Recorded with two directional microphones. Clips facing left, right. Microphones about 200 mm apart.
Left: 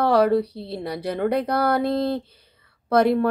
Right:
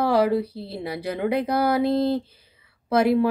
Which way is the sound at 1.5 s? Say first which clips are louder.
Even; 60° left (ahead or behind).